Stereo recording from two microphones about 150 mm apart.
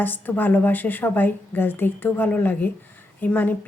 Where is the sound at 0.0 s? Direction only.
15° left (ahead or behind).